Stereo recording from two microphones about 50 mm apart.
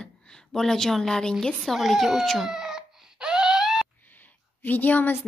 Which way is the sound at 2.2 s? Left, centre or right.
Centre.